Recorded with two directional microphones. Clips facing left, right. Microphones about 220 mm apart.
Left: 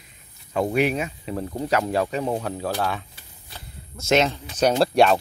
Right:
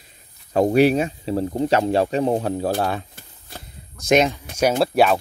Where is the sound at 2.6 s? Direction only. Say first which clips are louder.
Right 4 dB; 45° right (ahead or behind).